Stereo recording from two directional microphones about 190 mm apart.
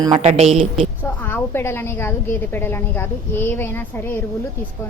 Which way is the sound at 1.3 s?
10° left (ahead or behind).